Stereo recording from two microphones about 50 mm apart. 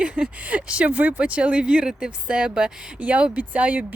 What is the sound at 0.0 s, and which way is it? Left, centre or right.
Speech, right.